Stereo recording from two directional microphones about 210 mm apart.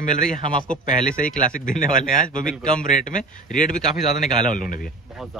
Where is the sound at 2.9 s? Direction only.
35° left (ahead or behind).